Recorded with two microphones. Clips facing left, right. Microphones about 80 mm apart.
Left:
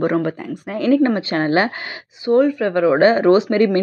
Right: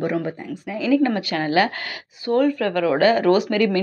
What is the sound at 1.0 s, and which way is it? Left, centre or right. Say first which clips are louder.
Speech: left 4 dB; left.